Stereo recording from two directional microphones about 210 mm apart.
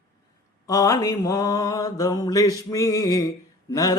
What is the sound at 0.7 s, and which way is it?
Mantra, 15° left (ahead or behind).